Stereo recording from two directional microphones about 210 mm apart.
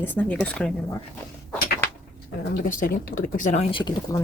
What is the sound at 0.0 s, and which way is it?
Speech, 10° left (ahead or behind).